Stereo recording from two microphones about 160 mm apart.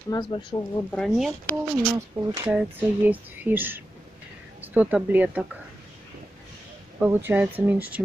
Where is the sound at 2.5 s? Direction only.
10° right (ahead or behind).